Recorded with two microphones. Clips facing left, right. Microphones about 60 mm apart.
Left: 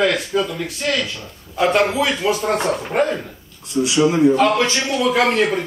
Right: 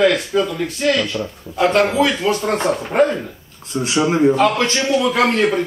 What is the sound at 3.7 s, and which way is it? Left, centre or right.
Speech, right.